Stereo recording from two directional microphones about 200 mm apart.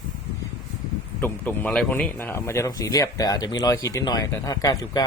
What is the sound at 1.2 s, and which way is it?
Speech, 10° left (ahead or behind).